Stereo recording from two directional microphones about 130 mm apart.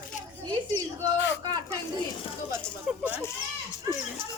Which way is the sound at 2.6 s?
15° left (ahead or behind).